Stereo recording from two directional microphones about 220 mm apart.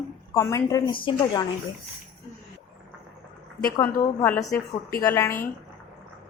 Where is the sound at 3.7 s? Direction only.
10° left (ahead or behind).